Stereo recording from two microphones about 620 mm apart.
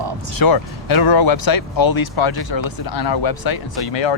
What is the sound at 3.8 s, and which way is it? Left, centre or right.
Speech, left.